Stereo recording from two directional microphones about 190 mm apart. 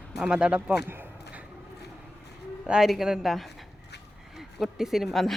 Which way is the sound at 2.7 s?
5° right (ahead or behind).